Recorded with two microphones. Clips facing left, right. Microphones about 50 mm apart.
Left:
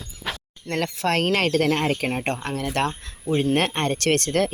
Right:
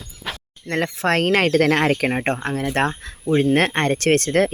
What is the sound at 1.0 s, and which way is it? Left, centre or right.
Speech, right.